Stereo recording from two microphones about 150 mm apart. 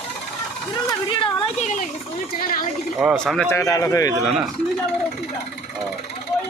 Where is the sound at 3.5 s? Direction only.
20° left (ahead or behind).